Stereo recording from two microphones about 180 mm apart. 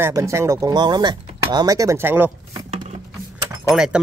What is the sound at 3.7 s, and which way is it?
Speech, 5° right (ahead or behind).